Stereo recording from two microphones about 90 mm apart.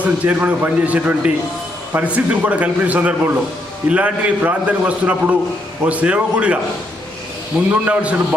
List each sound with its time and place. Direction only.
0.0 s a man's voice: 20° right (ahead or behind)
7.7 s a man's voice: 15° right (ahead or behind)